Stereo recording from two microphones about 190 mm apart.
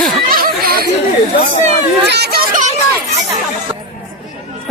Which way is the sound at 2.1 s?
55° right (ahead or behind).